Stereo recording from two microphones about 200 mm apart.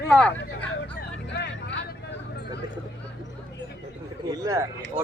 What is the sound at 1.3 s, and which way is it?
Vehicle, 60° left (ahead or behind).